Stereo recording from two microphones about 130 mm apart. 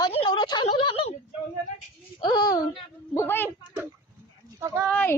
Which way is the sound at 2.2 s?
30° left (ahead or behind).